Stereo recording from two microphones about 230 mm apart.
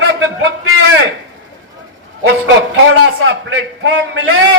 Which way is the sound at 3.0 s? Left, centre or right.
Right.